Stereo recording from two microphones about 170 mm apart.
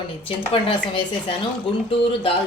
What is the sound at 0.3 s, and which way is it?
A woman's voice, 35° left (ahead or behind).